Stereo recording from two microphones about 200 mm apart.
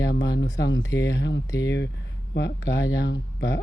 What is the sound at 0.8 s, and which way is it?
Speech, 15° left (ahead or behind).